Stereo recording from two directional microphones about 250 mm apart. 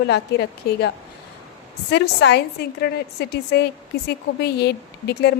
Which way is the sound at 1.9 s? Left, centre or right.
Left.